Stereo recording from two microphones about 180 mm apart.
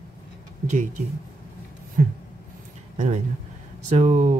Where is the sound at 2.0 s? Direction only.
50° right (ahead or behind).